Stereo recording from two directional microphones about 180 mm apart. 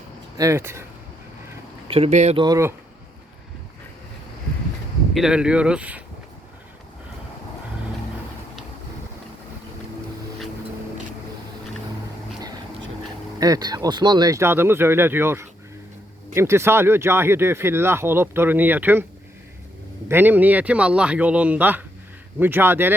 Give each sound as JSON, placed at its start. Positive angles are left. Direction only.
{"t": 0.3, "sound": "speech", "side_deg": -15}
{"t": 1.9, "sound": "speech", "side_deg": -35}
{"t": 2.4, "sound": "speech", "side_deg": -20}
{"t": 5.1, "sound": "speech", "side_deg": -5}
{"t": 13.4, "sound": "speech", "side_deg": -20}
{"t": 20.1, "sound": "speech", "side_deg": -10}